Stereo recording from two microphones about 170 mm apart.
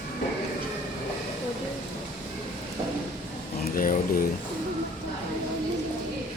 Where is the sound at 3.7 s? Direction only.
55° left (ahead or behind).